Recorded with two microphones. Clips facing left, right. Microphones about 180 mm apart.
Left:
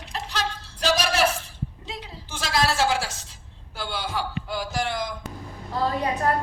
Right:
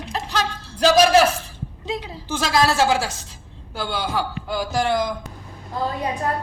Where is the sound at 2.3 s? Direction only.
45° right (ahead or behind).